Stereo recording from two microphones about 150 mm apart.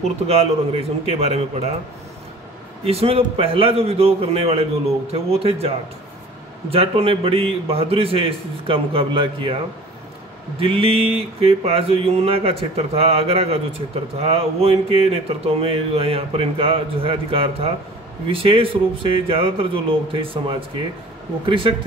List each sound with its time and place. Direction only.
0.3 s a man's voice: 40° right (ahead or behind)
2.8 s speech: 40° right (ahead or behind)
10.6 s speech: 40° right (ahead or behind)